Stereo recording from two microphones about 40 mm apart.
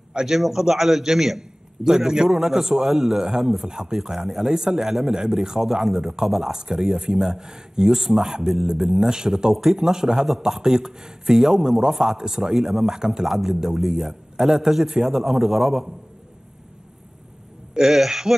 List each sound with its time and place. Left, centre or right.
0.3 s a man's voice: centre
17.7 s a man's voice: centre